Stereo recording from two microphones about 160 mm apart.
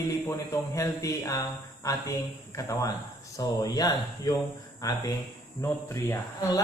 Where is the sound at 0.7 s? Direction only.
20° left (ahead or behind).